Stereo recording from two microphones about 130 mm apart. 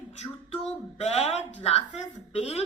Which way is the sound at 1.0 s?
55° left (ahead or behind).